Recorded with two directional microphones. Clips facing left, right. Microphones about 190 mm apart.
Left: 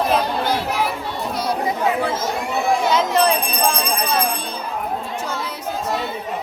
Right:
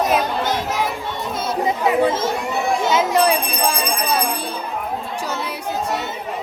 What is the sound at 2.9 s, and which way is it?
Speech, 10° right (ahead or behind).